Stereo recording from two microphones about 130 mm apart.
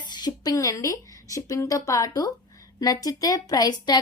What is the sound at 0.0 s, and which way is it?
A woman's voice, 35° left (ahead or behind).